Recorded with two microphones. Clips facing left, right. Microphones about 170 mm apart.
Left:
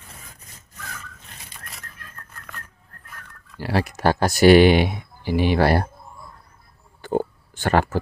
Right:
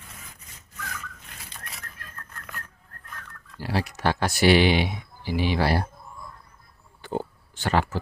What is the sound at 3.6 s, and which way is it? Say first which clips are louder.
Speech: left 5 dB; 60° left (ahead or behind).